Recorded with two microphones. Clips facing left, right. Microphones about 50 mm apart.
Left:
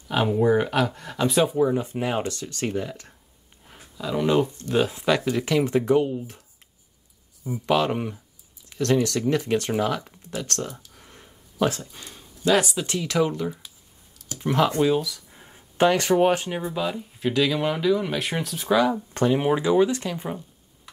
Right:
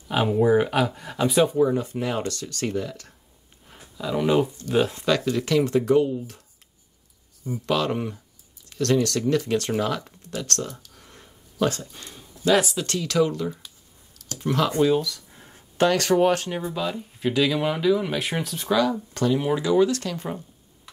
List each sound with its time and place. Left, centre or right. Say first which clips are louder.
0.1 s speech: right 1 dB; centre
1.8 s speech: left 1 dB; left
3.6 s a sound: right 1 dB; centre
4.6 s speech: right 1 dB; centre
5.0 s speech: even; centre
7.4 s speech: left 2 dB; centre
9.7 s speech: left 1 dB; centre
12.8 s speech: right 1 dB; centre
14.8 s a sound: right 1 dB; centre
15.8 s speech: even; centre
18.7 s speech: left 1 dB; centre
19.1 s speech: left 2 dB; left